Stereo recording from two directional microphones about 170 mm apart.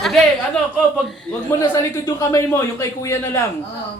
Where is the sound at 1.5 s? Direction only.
20° left (ahead or behind).